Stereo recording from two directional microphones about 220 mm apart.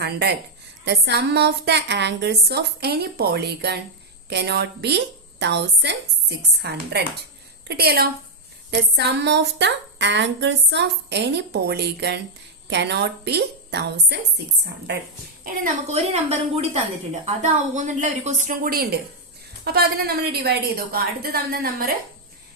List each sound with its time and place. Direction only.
0.0 s a woman's voice: 50° right (ahead or behind)
15.4 s a woman's voice: 35° right (ahead or behind)